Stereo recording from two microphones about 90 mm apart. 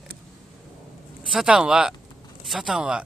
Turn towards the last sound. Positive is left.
turn(degrees=-10)  # may be behind; listen again after turning